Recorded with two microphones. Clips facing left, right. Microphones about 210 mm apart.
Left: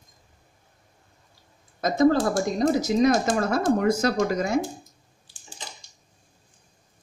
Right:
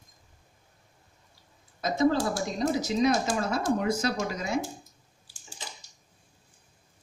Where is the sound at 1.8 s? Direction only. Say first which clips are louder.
Left 5 dB; 45° left (ahead or behind).